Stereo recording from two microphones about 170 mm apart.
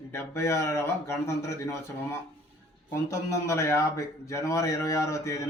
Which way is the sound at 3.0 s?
15° left (ahead or behind).